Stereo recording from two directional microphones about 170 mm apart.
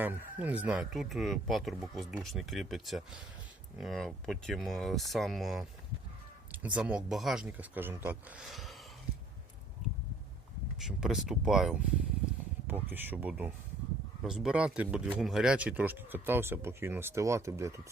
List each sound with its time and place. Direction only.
0.0 s speech: 10° right (ahead or behind)
10.8 s speech: 5° right (ahead or behind)